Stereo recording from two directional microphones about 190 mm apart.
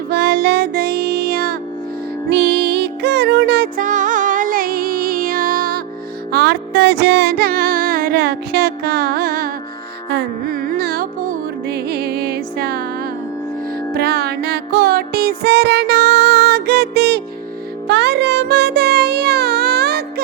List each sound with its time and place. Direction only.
0.1 s child singing: 55° right (ahead or behind)
2.3 s music: 60° right (ahead or behind)
3.8 s music: 40° right (ahead or behind)
6.3 s music: 60° right (ahead or behind)
10.1 s carnatic music: 55° right (ahead or behind)
13.9 s music: 55° right (ahead or behind)